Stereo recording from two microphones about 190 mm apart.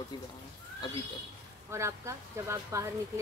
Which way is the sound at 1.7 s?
15° right (ahead or behind).